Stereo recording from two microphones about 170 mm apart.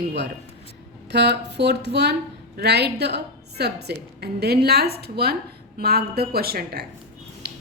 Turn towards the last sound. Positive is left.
turn(degrees=-65)  # may be behind; listen again after turning